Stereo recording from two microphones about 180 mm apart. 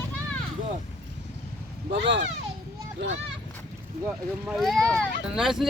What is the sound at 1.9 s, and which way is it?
Speech, 85° right.